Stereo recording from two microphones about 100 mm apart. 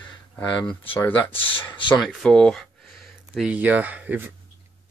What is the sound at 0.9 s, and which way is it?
Speech, 20° left (ahead or behind).